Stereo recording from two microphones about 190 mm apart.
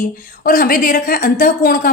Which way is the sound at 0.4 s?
50° left (ahead or behind).